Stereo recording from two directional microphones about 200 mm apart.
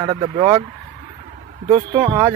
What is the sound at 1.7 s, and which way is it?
Speech, 25° right (ahead or behind).